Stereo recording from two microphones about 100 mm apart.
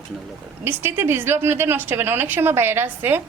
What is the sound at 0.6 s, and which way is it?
A woman's voice, 20° right (ahead or behind).